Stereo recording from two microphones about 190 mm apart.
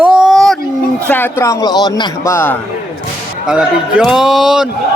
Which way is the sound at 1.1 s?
10° left (ahead or behind).